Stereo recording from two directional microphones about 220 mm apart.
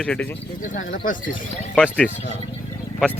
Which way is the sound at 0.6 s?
35° left (ahead or behind).